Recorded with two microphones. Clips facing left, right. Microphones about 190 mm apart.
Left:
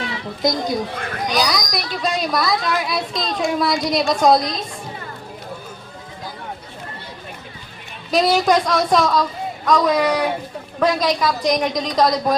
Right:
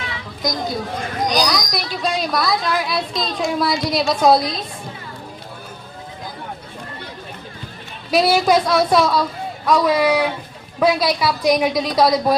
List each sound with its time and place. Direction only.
0.0 s chatter: 35° left (ahead or behind)
1.3 s speech: centre (ahead or behind)
8.1 s a woman's voice: 10° right (ahead or behind)